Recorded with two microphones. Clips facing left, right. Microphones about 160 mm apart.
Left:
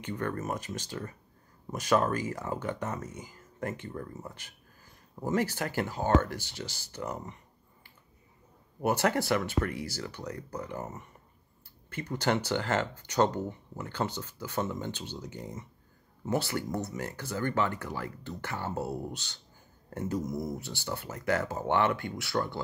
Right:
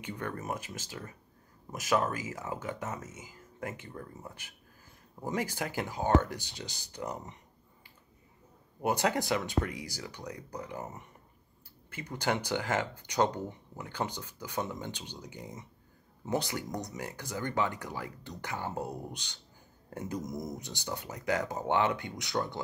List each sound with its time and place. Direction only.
0.0 s speech: 10° right (ahead or behind)
8.8 s speech: 15° right (ahead or behind)